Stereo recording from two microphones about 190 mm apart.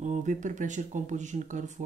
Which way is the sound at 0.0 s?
40° right (ahead or behind).